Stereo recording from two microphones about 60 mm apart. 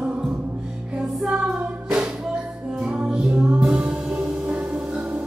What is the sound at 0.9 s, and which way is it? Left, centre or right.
Music, centre.